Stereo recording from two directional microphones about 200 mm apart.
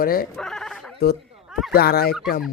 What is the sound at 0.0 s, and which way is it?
Speech, 45° left (ahead or behind).